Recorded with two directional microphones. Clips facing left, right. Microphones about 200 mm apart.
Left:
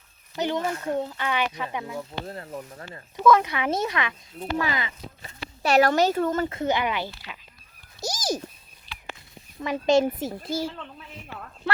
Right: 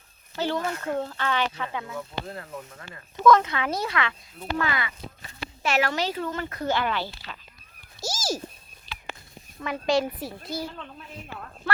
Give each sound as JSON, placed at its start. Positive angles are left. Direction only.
{"t": 0.3, "sound": "speech", "side_deg": 20}
{"t": 3.2, "sound": "speech", "side_deg": 10}
{"t": 5.6, "sound": "speech", "side_deg": 40}
{"t": 6.5, "sound": "speech", "side_deg": 20}
{"t": 8.0, "sound": "cat", "side_deg": 20}
{"t": 9.6, "sound": "speech", "side_deg": 20}
{"t": 10.7, "sound": "speech", "side_deg": 0}